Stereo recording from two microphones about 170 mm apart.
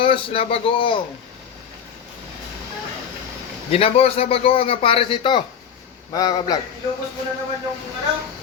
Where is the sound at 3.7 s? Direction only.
35° left (ahead or behind).